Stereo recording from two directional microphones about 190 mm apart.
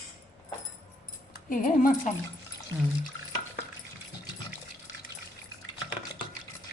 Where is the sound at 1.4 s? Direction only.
45° left (ahead or behind).